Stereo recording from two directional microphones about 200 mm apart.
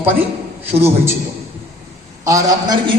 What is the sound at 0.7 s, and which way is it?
Speech, 30° right (ahead or behind).